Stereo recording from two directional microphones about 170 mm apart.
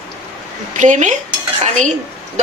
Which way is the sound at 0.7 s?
45° right (ahead or behind).